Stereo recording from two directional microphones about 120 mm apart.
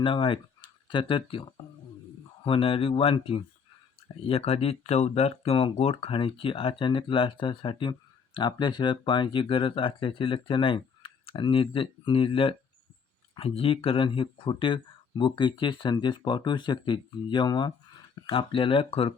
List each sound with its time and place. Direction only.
0.0 s speech: 45° left (ahead or behind)